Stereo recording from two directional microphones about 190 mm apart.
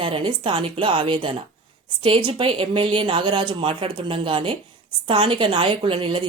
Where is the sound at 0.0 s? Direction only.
25° right (ahead or behind).